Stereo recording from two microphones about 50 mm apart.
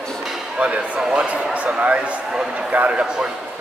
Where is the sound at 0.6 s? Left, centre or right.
Right.